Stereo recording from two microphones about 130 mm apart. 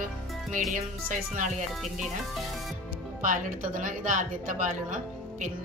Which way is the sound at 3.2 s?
90° right.